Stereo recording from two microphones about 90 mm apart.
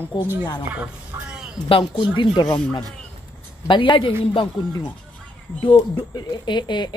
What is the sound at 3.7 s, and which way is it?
Speech, 60° left (ahead or behind).